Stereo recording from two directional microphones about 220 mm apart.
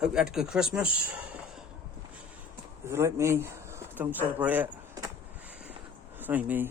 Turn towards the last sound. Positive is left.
turn(degrees=-5)  # may be behind; listen again after turning